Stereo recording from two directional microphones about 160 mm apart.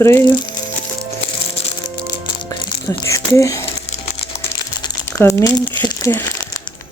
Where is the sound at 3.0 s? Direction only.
20° left (ahead or behind).